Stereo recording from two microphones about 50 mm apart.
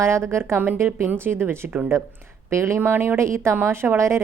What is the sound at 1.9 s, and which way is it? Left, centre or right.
Speech, right.